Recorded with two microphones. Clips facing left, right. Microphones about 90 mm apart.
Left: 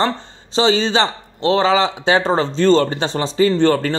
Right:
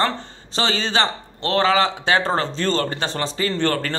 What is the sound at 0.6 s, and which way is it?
A man's voice, 20° left (ahead or behind).